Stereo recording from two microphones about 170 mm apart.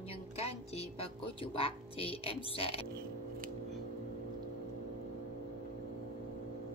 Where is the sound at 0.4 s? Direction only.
35° left (ahead or behind).